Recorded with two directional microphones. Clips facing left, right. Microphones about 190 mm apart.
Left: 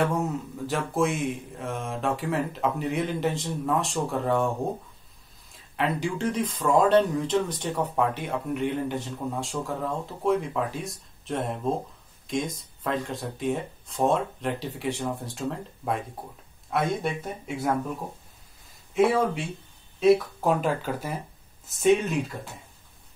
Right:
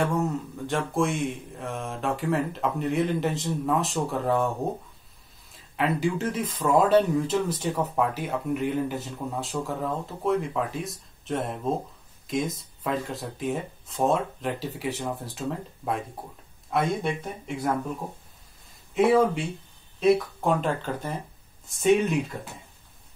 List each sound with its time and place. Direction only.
0.0 s speech: centre (ahead or behind)
5.5 s speech: centre (ahead or behind)
20.0 s speech: centre (ahead or behind)